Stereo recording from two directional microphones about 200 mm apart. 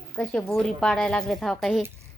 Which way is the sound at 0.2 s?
5° left (ahead or behind).